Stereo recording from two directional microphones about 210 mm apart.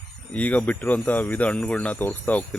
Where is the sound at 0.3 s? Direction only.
5° left (ahead or behind).